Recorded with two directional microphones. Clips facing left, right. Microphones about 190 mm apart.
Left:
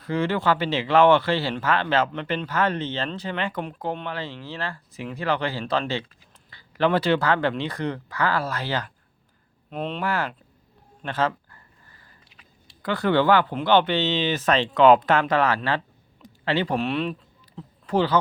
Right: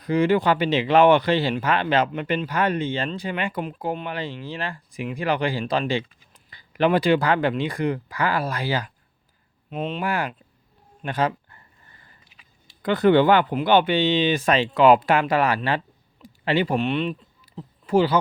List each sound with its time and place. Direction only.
0.0 s speech: 15° right (ahead or behind)
10.0 s speech: 15° right (ahead or behind)
11.0 s a sound: 15° right (ahead or behind)
12.8 s speech: 20° right (ahead or behind)
16.2 s a sound: 15° right (ahead or behind)
16.7 s speech: centre (ahead or behind)